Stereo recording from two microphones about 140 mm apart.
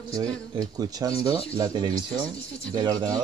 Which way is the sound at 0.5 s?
25° right (ahead or behind).